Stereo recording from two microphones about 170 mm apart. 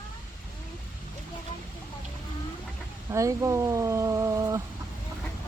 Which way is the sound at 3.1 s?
20° right (ahead or behind).